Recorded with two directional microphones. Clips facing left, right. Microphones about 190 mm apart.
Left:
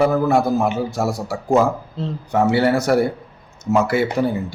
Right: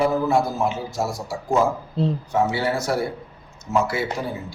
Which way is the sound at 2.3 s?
65° left (ahead or behind).